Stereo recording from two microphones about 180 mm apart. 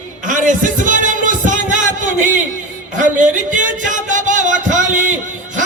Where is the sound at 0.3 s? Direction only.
45° right (ahead or behind).